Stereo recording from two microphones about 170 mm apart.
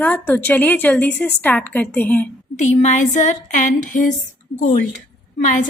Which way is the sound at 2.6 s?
45° left (ahead or behind).